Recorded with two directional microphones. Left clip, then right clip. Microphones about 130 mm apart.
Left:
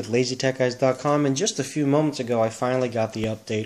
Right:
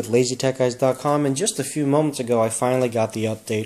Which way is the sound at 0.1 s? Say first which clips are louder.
Right 3 dB; 25° right (ahead or behind).